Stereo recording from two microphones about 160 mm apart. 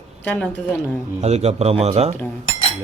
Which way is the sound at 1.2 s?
40° right (ahead or behind).